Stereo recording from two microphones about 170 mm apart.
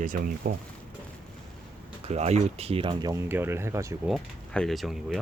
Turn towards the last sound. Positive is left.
turn(degrees=0)  # may be behind; listen again after turning